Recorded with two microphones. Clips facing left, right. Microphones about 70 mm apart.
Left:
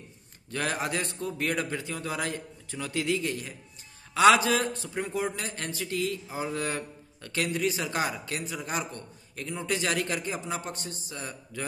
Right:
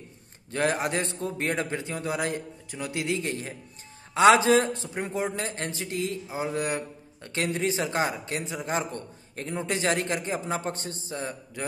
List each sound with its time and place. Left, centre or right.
0.5 s a man's voice: right